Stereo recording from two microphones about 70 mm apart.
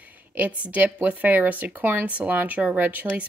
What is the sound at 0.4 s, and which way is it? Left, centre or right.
Speech, right.